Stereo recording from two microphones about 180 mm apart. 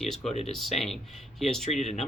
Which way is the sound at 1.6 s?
40° left (ahead or behind).